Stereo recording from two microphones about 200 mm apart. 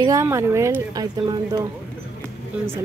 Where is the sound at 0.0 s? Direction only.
15° right (ahead or behind).